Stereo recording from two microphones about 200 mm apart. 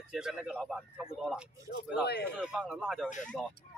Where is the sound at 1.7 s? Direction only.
55° left (ahead or behind).